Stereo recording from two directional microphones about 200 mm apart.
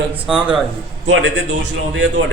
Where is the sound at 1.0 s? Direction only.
65° right (ahead or behind).